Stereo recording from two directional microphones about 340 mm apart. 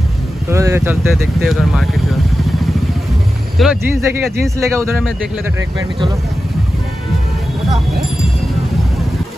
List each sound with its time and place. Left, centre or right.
0.5 s speech: centre
3.5 s speech: centre